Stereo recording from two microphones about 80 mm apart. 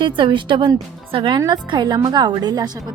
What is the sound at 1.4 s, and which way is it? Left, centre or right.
A woman's voice, right.